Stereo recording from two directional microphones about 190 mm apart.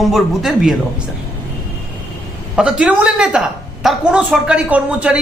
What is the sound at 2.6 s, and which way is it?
A woman's voice, 5° right (ahead or behind).